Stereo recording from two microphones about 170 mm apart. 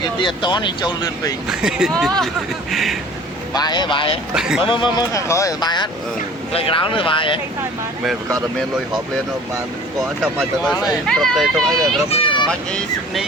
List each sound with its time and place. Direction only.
0.0 s speech: 25° left (ahead or behind)
1.5 s speech: 5° right (ahead or behind)
3.5 s speech: 25° left (ahead or behind)
4.4 s speech: 5° right (ahead or behind)
4.6 s speech: 30° left (ahead or behind)
11.0 s speech: 5° left (ahead or behind)
12.1 s vehicle: 30° left (ahead or behind)
12.5 s speech: 5° left (ahead or behind)